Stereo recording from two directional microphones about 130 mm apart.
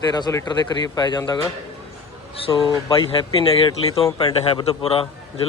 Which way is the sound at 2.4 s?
40° left (ahead or behind).